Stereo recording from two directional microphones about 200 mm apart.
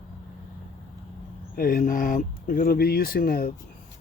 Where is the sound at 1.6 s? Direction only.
40° left (ahead or behind).